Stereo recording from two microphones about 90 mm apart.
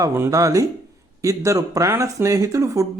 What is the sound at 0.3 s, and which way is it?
Speech, 40° right (ahead or behind).